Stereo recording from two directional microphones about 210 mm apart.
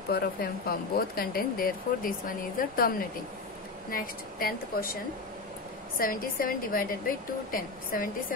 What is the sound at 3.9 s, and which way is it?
Speech, 45° left (ahead or behind).